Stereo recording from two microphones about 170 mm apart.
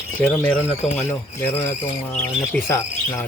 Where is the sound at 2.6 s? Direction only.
15° left (ahead or behind).